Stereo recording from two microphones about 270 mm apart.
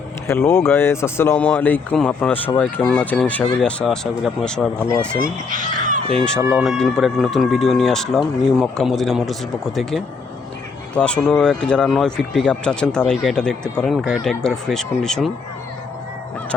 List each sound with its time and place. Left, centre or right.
0.3 s speech: centre
5.2 s speech: right
6.2 s speech: centre